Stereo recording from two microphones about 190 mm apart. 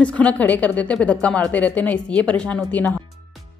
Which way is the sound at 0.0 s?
5° left (ahead or behind).